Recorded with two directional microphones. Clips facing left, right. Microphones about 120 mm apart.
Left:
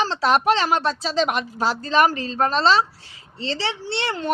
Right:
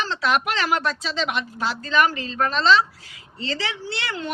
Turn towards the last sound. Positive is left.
turn(degrees=30)  # may be behind; listen again after turning